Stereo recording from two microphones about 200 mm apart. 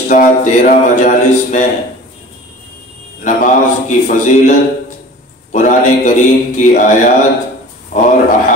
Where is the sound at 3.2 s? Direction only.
40° left (ahead or behind).